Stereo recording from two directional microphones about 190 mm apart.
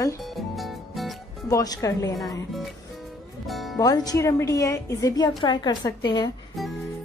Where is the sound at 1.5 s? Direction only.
15° left (ahead or behind).